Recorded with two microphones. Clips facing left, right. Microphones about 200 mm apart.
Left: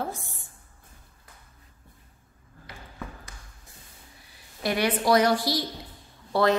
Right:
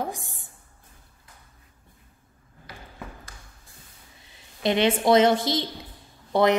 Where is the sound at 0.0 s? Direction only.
15° right (ahead or behind).